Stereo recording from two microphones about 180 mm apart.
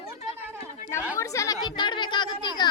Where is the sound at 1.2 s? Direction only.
20° left (ahead or behind).